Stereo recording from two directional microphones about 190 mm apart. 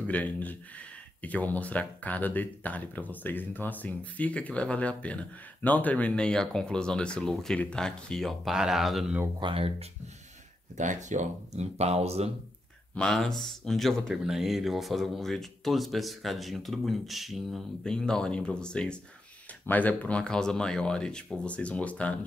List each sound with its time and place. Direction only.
0.0 s speech: 10° left (ahead or behind)
9.4 s speech: 30° right (ahead or behind)
12.9 s speech: 5° left (ahead or behind)